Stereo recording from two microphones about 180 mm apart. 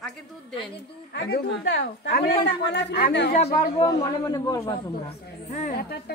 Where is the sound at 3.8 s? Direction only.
20° left (ahead or behind).